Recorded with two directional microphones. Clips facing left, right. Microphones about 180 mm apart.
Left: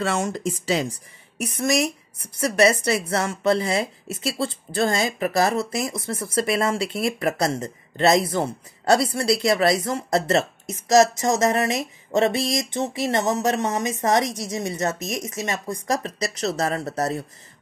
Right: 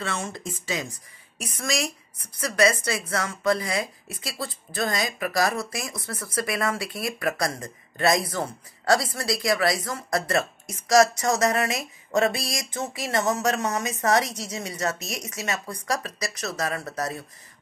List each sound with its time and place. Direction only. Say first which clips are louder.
0.2 s speech: left 8 dB; 35° left (ahead or behind)
2.5 s speech: left 3 dB; 25° left (ahead or behind)